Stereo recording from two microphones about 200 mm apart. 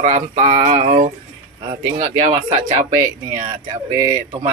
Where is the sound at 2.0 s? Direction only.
25° right (ahead or behind).